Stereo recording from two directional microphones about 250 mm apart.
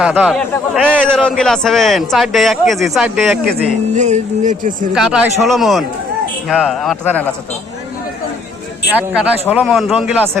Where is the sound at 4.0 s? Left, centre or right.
Right.